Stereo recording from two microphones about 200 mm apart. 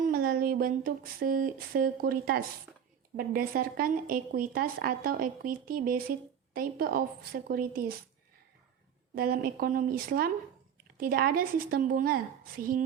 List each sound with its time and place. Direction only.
0.0 s a sound: 45° right (ahead or behind)
3.2 s a woman's voice: 45° right (ahead or behind)
9.1 s a woman's voice: 45° right (ahead or behind)